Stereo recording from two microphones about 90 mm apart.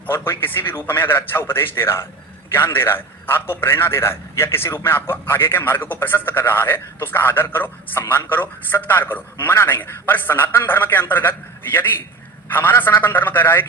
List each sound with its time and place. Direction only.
0.1 s a man's voice: 25° left (ahead or behind)